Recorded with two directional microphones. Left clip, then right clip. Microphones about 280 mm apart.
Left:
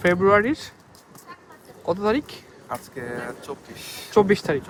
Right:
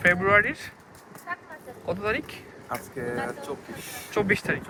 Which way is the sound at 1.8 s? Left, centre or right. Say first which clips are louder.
Left 5 dB; left.